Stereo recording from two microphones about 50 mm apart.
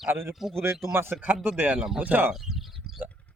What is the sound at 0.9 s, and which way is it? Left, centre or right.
Speech, right.